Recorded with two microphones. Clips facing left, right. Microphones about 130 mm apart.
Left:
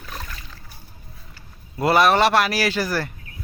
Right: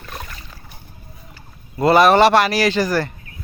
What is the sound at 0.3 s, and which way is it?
Splash, 10° right (ahead or behind).